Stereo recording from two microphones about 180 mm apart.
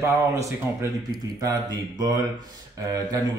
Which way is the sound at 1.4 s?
20° right (ahead or behind).